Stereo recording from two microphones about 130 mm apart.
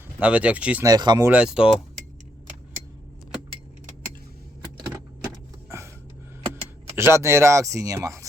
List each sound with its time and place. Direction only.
0.2 s speech: 10° right (ahead or behind)
0.9 s speech: 30° right (ahead or behind)
1.2 s speech: 10° right (ahead or behind)
5.6 s a sound: 20° right (ahead or behind)
6.5 s speech: 20° right (ahead or behind)